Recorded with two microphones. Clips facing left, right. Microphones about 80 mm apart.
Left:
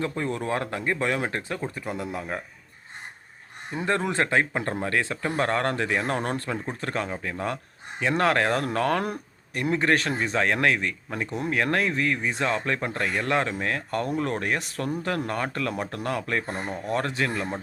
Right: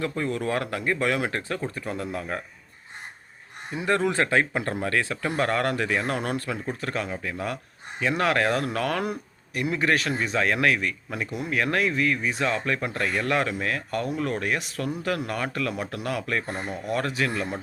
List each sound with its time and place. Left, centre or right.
0.0 s speech: left
3.8 s speech: left